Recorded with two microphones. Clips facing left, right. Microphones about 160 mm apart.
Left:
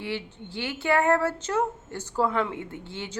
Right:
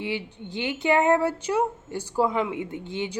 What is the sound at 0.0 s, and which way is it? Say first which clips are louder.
A woman's voice: right 2 dB; 15° right (ahead or behind).